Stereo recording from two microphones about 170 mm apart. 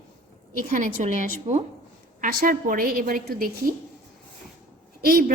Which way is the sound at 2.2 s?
55° right (ahead or behind).